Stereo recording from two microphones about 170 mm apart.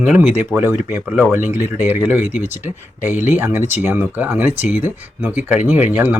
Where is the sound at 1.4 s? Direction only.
50° left (ahead or behind).